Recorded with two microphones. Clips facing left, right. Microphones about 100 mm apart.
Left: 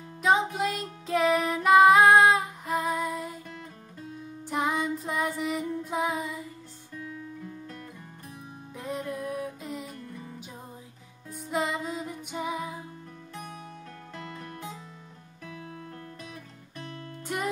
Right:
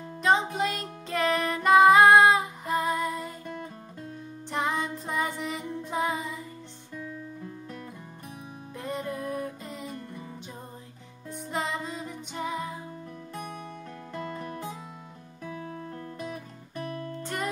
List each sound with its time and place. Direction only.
0.2 s music: 5° left (ahead or behind)
4.5 s music: 5° left (ahead or behind)
8.7 s music: centre (ahead or behind)
11.2 s music: centre (ahead or behind)
15.4 s music: 30° right (ahead or behind)
17.2 s music: 10° left (ahead or behind)